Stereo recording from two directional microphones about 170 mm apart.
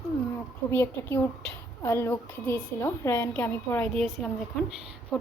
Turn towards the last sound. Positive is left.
turn(degrees=0)  # may be behind; listen again after turning